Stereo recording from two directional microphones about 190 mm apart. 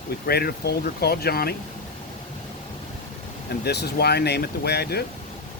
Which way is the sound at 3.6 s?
60° left (ahead or behind).